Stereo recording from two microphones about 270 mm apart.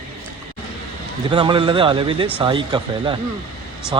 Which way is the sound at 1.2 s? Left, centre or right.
Centre.